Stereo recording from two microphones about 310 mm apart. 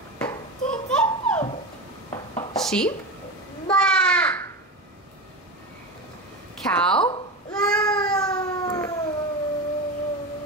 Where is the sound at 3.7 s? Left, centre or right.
Centre.